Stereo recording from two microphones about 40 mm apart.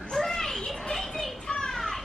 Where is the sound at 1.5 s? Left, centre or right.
Centre.